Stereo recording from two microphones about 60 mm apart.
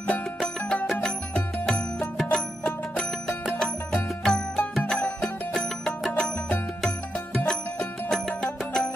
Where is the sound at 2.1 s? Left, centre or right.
Centre.